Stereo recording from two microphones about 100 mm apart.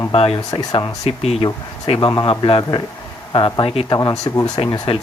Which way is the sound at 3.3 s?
50° left (ahead or behind).